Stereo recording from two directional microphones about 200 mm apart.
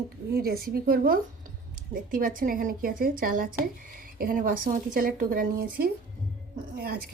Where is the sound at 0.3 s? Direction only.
50° right (ahead or behind).